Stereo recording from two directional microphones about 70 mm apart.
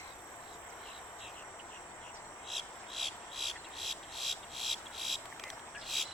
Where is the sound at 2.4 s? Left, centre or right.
Centre.